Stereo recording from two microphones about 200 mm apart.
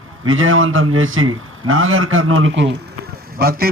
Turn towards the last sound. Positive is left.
turn(degrees=-50)  # may be behind; listen again after turning